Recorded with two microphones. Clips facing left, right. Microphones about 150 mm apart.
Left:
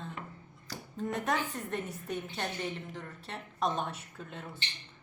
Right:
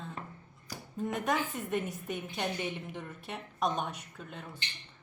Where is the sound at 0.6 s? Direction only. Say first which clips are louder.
Right 1 dB; 5° right (ahead or behind).